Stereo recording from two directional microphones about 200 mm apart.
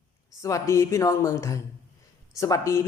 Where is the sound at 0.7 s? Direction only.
15° left (ahead or behind).